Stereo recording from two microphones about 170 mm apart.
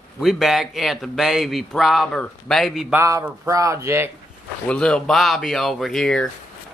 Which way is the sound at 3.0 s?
15° right (ahead or behind).